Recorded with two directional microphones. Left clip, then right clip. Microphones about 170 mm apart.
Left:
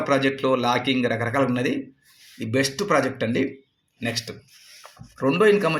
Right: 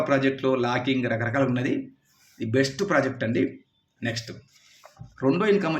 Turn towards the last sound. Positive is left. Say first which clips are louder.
# left 4 dB
turn(degrees=30)  # may be behind; listen again after turning